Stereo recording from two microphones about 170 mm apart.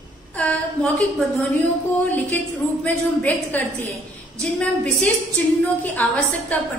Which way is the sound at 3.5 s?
10° left (ahead or behind).